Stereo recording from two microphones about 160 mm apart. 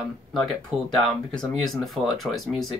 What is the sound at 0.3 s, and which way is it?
Speech, centre (ahead or behind).